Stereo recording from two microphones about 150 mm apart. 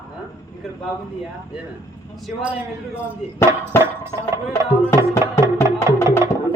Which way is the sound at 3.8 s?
15° right (ahead or behind).